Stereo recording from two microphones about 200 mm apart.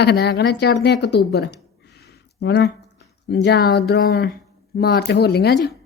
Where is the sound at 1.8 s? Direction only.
55° left (ahead or behind).